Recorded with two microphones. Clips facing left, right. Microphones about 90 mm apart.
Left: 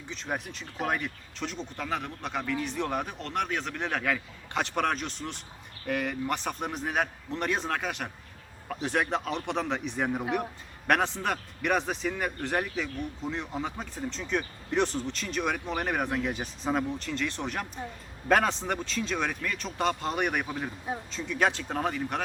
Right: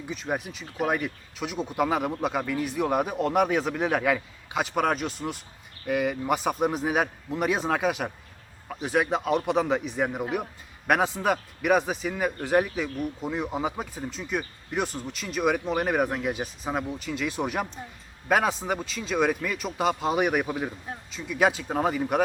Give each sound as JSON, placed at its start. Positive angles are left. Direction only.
{"t": 0.1, "sound": "speech", "side_deg": -5}